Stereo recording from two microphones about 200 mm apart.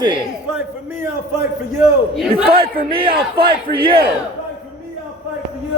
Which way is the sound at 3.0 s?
25° right (ahead or behind).